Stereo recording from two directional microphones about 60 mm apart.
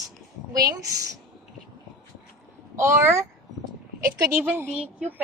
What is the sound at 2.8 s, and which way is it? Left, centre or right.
Speech, right.